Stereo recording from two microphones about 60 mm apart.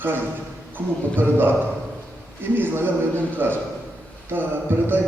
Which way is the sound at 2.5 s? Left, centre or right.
Right.